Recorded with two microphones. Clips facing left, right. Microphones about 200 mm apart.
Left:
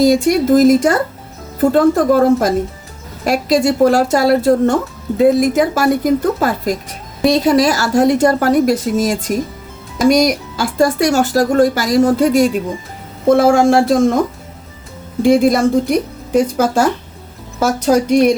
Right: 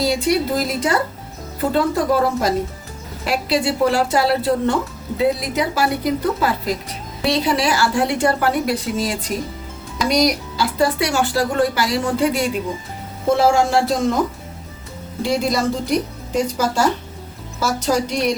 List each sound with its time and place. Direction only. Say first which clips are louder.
0.0 s speech: left 7 dB; 45° left (ahead or behind)
13.3 s speech: left 5 dB; 55° left (ahead or behind)
15.2 s speech: left 9 dB; 55° left (ahead or behind)
17.6 s speech: left 6 dB; 55° left (ahead or behind)